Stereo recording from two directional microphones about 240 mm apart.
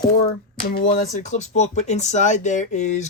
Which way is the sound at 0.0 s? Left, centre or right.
Left.